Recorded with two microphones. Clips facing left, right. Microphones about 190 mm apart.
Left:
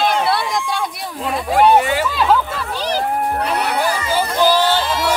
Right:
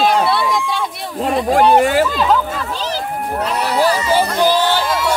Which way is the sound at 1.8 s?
45° right (ahead or behind).